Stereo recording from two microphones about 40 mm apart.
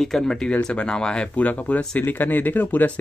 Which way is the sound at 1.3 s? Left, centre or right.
Left.